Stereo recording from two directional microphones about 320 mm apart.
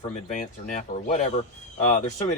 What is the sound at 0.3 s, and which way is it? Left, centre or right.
Speech, left.